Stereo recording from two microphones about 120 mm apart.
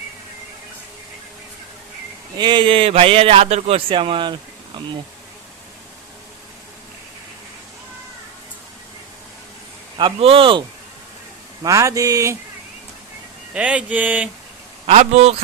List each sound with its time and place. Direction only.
2.3 s speech: 40° right (ahead or behind)
10.0 s speech: 50° right (ahead or behind)
11.6 s speech: 25° right (ahead or behind)
13.5 s a sound: 10° right (ahead or behind)
14.8 s a man's voice: 65° right (ahead or behind)